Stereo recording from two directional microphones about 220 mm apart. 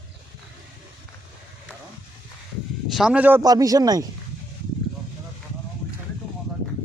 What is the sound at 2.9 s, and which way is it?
Speech, 5° right (ahead or behind).